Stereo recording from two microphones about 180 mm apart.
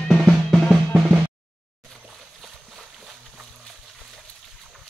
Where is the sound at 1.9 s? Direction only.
Centre (ahead or behind).